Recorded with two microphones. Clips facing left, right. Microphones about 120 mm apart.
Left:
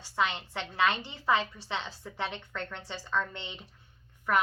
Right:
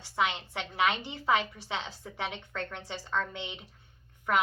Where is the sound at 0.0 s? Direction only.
15° right (ahead or behind).